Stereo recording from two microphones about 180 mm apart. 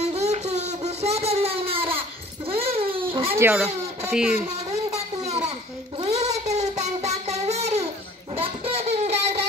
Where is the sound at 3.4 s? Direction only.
15° right (ahead or behind).